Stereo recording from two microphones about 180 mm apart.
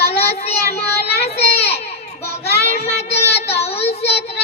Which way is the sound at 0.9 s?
65° left (ahead or behind).